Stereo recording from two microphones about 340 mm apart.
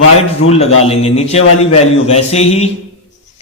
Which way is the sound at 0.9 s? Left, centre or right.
Centre.